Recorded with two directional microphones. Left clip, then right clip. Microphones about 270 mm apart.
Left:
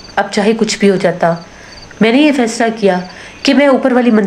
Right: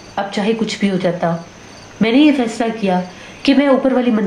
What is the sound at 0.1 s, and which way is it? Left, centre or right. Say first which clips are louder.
A woman's voice: left 6 dB; left.